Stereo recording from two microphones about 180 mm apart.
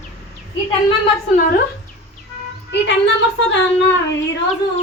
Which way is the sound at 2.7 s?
75° left (ahead or behind).